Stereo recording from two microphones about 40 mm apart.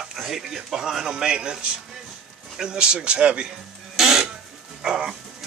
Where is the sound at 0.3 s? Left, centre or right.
Centre.